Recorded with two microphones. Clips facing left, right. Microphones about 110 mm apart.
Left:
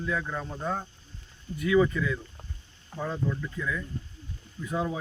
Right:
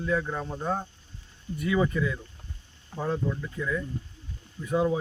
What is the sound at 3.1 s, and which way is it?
Speech, 20° right (ahead or behind).